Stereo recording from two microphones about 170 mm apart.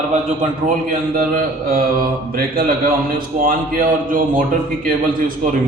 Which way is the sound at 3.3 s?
55° right (ahead or behind).